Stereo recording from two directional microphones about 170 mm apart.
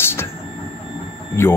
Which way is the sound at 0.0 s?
15° left (ahead or behind).